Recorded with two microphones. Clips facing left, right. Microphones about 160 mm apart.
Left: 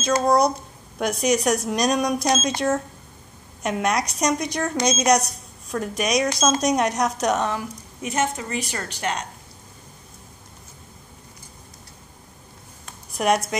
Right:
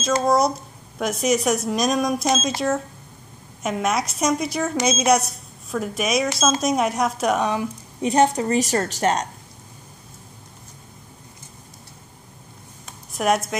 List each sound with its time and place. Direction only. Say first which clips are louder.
0.0 s a woman's voice: even; centre (ahead or behind)
8.0 s a woman's voice: right 7 dB; 35° right (ahead or behind)
13.1 s speech: even; centre (ahead or behind)